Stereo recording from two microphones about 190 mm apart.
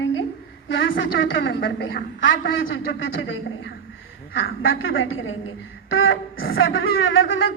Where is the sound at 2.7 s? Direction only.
90° left.